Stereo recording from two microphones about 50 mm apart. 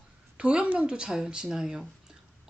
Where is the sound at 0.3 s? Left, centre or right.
Centre.